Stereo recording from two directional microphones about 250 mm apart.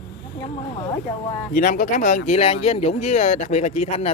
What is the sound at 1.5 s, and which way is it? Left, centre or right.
Speech, left.